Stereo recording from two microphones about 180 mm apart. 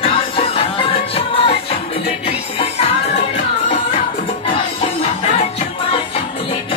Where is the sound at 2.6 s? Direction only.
35° left (ahead or behind).